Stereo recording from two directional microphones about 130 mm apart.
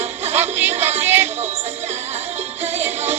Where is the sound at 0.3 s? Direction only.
15° right (ahead or behind).